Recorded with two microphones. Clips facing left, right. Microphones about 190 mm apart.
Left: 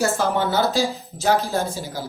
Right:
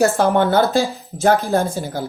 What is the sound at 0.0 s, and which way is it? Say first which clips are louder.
Speech: right 6 dB; 55° right (ahead or behind).